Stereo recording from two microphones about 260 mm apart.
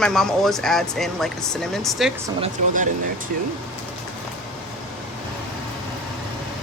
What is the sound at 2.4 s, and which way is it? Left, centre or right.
Speech, right.